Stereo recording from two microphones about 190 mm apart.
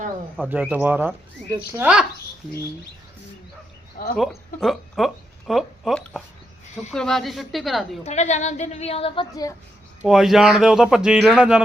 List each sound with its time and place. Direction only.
0.4 s speech: 10° right (ahead or behind)
3.9 s speech: 50° left (ahead or behind)
4.2 s a man's voice: centre (ahead or behind)
8.0 s a woman's voice: 35° left (ahead or behind)
9.3 s a woman's voice: 20° left (ahead or behind)
10.0 s a man's voice: centre (ahead or behind)